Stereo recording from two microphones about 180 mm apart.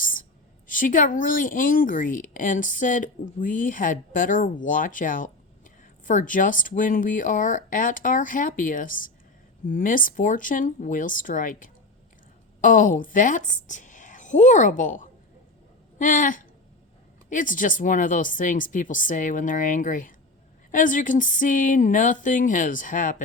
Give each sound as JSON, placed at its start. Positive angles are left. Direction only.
{"t": 0.7, "sound": "a woman's voice", "side_deg": 45}